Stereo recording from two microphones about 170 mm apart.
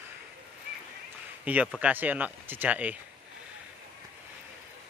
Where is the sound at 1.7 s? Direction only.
10° right (ahead or behind).